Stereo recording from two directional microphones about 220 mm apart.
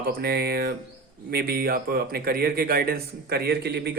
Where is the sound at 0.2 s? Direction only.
45° right (ahead or behind).